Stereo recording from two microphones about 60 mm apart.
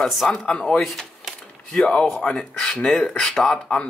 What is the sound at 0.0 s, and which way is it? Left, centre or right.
Speech, centre.